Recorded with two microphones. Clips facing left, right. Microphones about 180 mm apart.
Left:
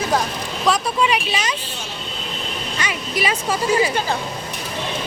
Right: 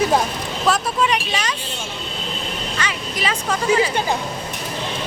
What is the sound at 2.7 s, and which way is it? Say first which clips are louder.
Vehicle: left 5 dB; 10° left (ahead or behind).